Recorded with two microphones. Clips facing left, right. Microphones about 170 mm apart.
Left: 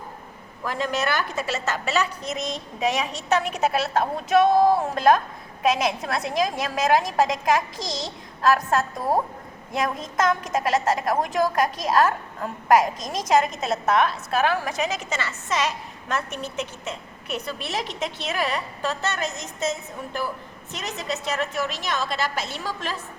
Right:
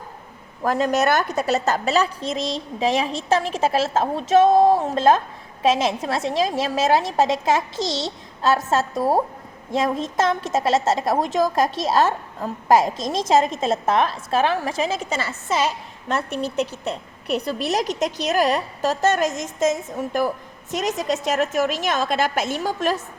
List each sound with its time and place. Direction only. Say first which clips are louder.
0.6 s a woman's voice: right 6 dB; 45° right (ahead or behind)